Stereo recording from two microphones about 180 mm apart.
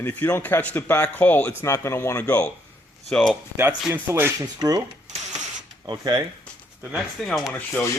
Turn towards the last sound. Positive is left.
turn(degrees=10)  # may be behind; listen again after turning